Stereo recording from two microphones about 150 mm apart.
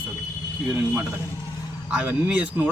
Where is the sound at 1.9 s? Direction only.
5° right (ahead or behind).